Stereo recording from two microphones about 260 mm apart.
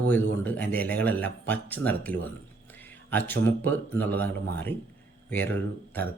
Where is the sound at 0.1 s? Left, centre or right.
Centre.